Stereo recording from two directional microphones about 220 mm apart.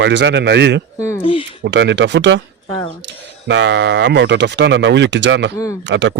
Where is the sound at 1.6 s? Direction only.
50° right (ahead or behind).